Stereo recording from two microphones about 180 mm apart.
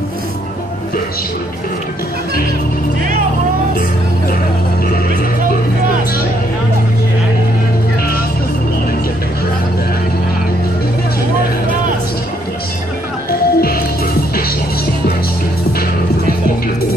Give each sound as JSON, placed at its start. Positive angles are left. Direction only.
{"t": 13.3, "sound": "music", "side_deg": 60}